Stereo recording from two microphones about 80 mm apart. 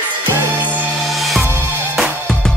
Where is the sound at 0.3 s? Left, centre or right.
Right.